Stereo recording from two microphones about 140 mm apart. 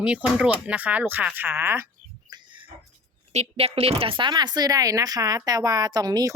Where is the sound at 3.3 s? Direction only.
50° right (ahead or behind).